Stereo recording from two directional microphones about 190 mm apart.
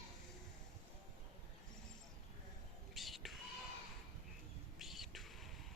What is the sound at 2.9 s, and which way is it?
Music, centre (ahead or behind).